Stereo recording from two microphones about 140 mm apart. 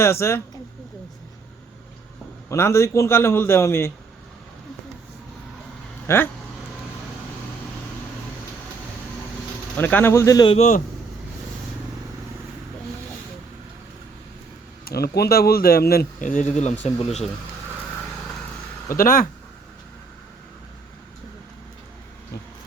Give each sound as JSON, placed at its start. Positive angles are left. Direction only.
{"t": 0.0, "sound": "speech", "side_deg": 20}
{"t": 2.5, "sound": "a man's voice", "side_deg": 20}
{"t": 6.1, "sound": "speech", "side_deg": 20}
{"t": 9.7, "sound": "a man's voice", "side_deg": 15}
{"t": 10.4, "sound": "a man's voice", "side_deg": 45}
{"t": 14.8, "sound": "speech", "side_deg": 90}
{"t": 18.9, "sound": "speech", "side_deg": 85}